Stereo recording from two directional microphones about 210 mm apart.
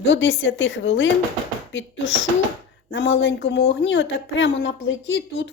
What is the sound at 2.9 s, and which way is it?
Speech, 60° left (ahead or behind).